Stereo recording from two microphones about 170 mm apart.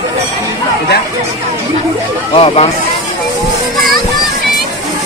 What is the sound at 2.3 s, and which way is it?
Speech, 35° left (ahead or behind).